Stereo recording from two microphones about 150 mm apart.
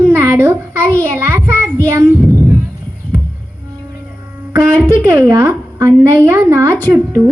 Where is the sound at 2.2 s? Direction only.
15° left (ahead or behind).